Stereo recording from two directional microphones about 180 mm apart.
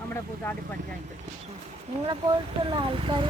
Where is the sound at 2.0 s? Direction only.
25° right (ahead or behind).